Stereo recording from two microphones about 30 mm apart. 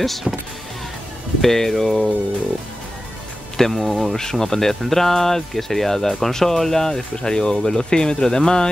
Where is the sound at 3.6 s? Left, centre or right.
Centre.